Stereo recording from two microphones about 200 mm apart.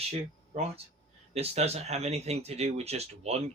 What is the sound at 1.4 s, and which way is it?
Speech, 30° right (ahead or behind).